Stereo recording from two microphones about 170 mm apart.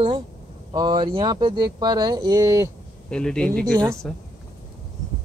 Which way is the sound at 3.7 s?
25° right (ahead or behind).